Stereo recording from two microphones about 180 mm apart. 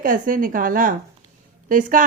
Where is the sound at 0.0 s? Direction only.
50° right (ahead or behind).